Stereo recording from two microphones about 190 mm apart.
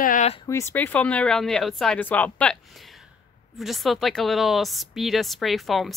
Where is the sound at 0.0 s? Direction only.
45° left (ahead or behind).